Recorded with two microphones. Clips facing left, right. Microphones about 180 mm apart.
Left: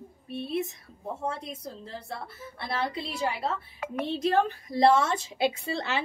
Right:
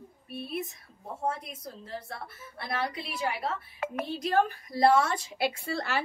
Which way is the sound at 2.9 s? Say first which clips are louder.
Left 2 dB; 25° left (ahead or behind).